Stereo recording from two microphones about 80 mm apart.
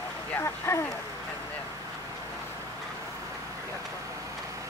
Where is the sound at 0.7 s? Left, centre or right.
Left.